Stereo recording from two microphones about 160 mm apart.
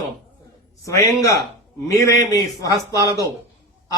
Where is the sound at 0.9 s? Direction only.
20° left (ahead or behind).